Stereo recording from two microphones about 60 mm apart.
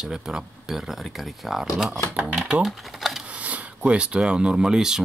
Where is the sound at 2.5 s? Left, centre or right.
Centre.